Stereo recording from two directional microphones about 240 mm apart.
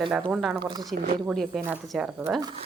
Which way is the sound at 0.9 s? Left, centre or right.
Right.